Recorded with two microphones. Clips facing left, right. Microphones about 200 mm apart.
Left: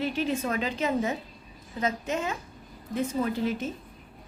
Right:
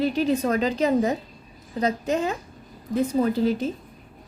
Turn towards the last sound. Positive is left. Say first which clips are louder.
# right 6 dB
turn(degrees=-35)  # may be behind; listen again after turning